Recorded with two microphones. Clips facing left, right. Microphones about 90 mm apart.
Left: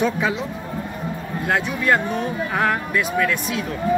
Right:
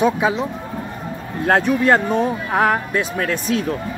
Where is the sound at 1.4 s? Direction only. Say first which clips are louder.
Right 5 dB; 40° right (ahead or behind).